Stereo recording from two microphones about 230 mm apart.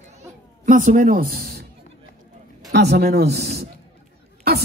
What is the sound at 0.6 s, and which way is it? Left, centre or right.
Speech, right.